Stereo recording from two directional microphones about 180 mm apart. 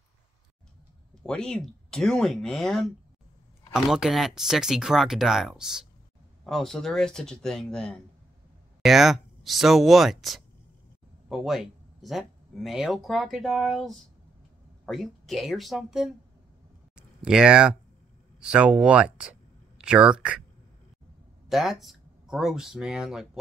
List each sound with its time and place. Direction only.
1.2 s speech: 5° left (ahead or behind)
16.9 s a sound: 5° right (ahead or behind)
18.4 s speech: 5° right (ahead or behind)
21.5 s speech: centre (ahead or behind)